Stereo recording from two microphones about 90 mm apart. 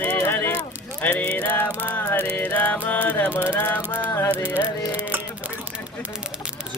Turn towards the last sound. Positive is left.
turn(degrees=-20)  # may be behind; listen again after turning